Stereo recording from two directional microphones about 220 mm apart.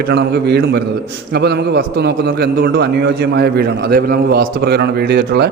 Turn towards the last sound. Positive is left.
turn(degrees=-50)  # may be behind; listen again after turning